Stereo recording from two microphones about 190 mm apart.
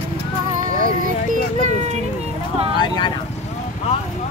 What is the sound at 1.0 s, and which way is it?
Music, 40° right (ahead or behind).